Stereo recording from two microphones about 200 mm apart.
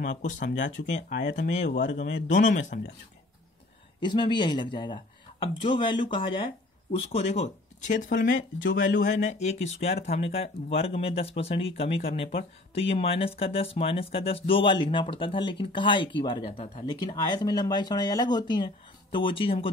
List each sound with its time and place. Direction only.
0.0 s speech: 40° left (ahead or behind)
0.6 s speech: 65° left (ahead or behind)
0.8 s speech: 35° left (ahead or behind)
1.7 s speech: 60° left (ahead or behind)
2.0 s speech: 40° left (ahead or behind)
4.0 s speech: 20° left (ahead or behind); by 8.3 s 40° left (ahead or behind)
8.3 s speech: 70° left (ahead or behind)
8.7 s speech: 40° left (ahead or behind)
17.0 s speech: 20° left (ahead or behind)